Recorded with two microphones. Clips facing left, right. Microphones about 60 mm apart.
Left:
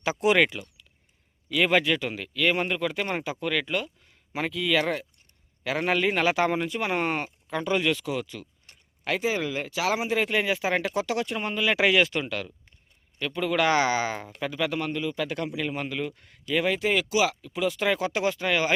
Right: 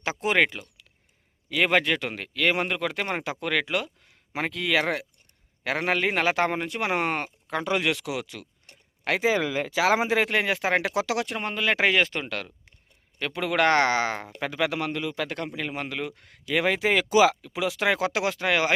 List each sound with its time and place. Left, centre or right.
0.0 s speech: right
1.5 s speech: right
5.9 s speech: right
6.7 s speech: right
13.1 s speech: right